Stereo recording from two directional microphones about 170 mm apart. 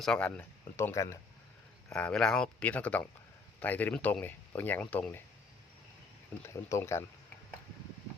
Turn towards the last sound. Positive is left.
turn(degrees=15)  # may be behind; listen again after turning